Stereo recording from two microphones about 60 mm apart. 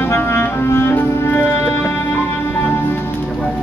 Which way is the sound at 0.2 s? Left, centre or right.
Left.